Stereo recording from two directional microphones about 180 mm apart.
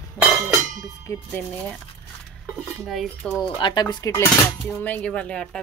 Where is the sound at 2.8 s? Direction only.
Centre (ahead or behind).